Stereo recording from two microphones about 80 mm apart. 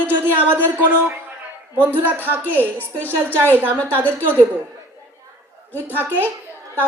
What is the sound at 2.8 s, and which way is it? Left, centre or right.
Speech, left.